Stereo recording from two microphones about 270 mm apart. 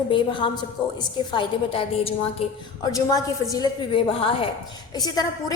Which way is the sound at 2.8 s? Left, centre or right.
Centre.